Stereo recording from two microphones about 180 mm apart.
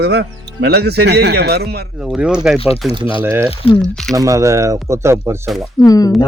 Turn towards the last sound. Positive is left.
turn(degrees=20)  # may be behind; listen again after turning